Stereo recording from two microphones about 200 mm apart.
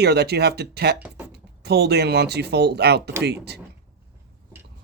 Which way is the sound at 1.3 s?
55° right (ahead or behind).